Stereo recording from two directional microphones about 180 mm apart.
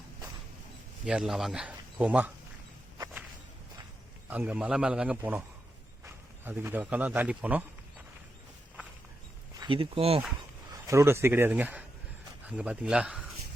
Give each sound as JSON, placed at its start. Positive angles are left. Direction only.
{"t": 1.0, "sound": "speech", "side_deg": -5}
{"t": 4.3, "sound": "speech", "side_deg": -10}
{"t": 6.4, "sound": "speech", "side_deg": -10}
{"t": 9.6, "sound": "speech", "side_deg": -30}
{"t": 10.7, "sound": "a man's voice", "side_deg": -15}